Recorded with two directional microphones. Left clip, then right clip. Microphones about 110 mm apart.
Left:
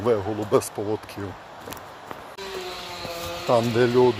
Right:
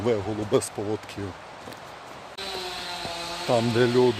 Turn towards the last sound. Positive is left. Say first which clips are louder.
# left 2 dB
turn(degrees=-5)  # may be behind; listen again after turning